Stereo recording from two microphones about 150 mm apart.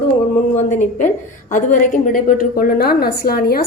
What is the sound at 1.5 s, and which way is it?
A woman's voice, 60° left (ahead or behind).